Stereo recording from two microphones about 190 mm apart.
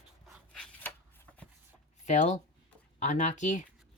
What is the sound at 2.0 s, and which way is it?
Speech, 40° left (ahead or behind).